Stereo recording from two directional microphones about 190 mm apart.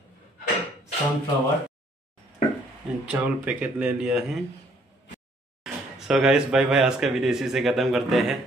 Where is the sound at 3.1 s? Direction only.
5° right (ahead or behind).